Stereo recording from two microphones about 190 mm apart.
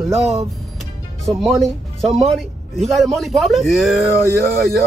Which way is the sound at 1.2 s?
Centre (ahead or behind).